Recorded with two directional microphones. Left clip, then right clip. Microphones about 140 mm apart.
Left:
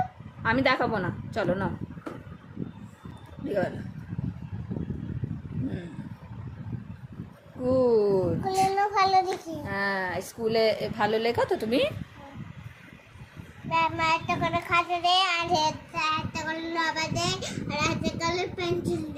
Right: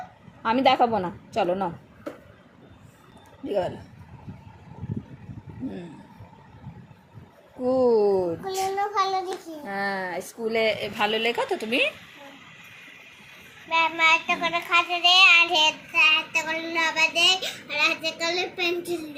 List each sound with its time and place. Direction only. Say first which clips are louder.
0.4 s a woman's voice: right 4 dB; 15° right (ahead or behind)
3.4 s speech: right 2 dB; 5° right (ahead or behind)
7.8 s a woman's voice: right 2 dB; 10° right (ahead or behind)
8.7 s a woman's voice: left 1 dB; 25° left (ahead or behind)
9.6 s speech: even; centre (ahead or behind)
10.4 s a woman's voice: even; 20° left (ahead or behind)
13.7 s child singing: right 4 dB; 10° left (ahead or behind); by 15.6 s 30° left (ahead or behind)
15.6 s child singing: right 7 dB; 15° left (ahead or behind)